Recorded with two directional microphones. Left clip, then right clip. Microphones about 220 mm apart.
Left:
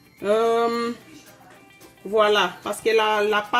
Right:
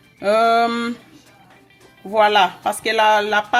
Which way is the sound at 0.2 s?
30° right (ahead or behind).